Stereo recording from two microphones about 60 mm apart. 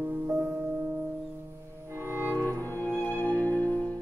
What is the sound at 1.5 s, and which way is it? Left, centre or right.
Music, right.